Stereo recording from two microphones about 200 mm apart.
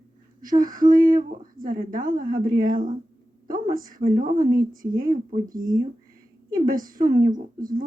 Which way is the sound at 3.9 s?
45° right (ahead or behind).